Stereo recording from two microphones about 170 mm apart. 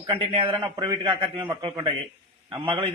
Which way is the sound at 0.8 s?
20° right (ahead or behind).